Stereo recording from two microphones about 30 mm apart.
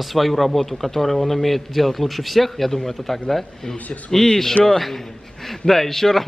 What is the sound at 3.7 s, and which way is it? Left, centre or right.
Speech, left.